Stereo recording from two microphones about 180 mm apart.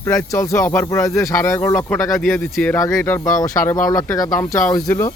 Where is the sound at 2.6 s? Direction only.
10° left (ahead or behind).